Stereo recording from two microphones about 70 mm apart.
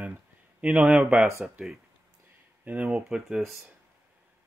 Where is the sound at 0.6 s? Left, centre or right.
Centre.